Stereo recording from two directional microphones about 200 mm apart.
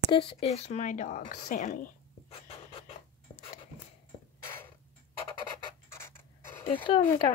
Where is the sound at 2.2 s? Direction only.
30° left (ahead or behind).